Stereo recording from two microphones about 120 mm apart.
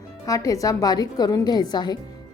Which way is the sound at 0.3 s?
30° left (ahead or behind).